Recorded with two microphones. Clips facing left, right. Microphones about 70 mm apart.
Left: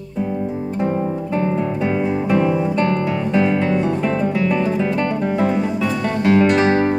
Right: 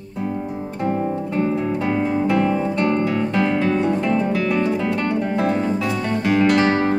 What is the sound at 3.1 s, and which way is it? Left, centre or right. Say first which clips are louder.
Music: left 2 dB; centre.